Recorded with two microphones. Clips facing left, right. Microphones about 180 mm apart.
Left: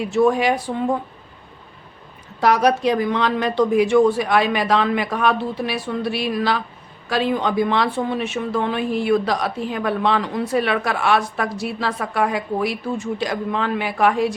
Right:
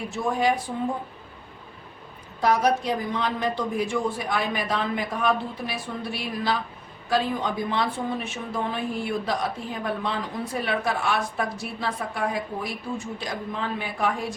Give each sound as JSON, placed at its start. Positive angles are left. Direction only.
{"t": 0.0, "sound": "a man's voice", "side_deg": 80}
{"t": 2.4, "sound": "a woman's voice", "side_deg": 80}